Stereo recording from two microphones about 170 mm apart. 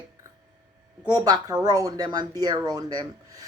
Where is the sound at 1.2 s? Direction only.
25° right (ahead or behind).